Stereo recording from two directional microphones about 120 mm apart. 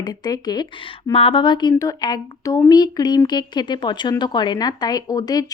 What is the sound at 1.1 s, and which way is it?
A woman's voice, 50° left (ahead or behind).